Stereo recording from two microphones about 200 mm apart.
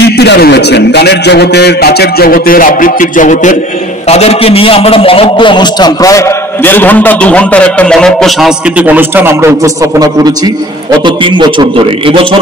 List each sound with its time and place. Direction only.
0.2 s a man's voice: 55° left (ahead or behind); by 12.4 s 25° right (ahead or behind)